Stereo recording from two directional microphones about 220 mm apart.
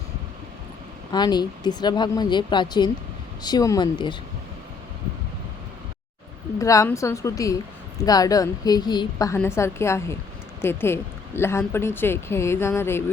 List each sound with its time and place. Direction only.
1.1 s speech: 20° left (ahead or behind)
6.6 s speech: 15° left (ahead or behind)